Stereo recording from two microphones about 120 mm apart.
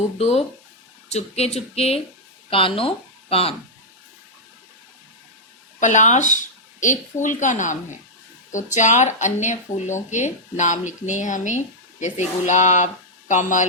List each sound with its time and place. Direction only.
0.2 s speech: 60° left (ahead or behind)
5.8 s speech: 85° left